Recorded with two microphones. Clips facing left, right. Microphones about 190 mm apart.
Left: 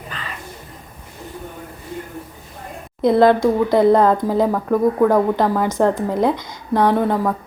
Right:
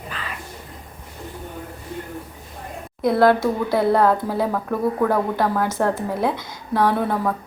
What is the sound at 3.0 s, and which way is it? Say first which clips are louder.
A woman's voice: left 3 dB; 20° left (ahead or behind).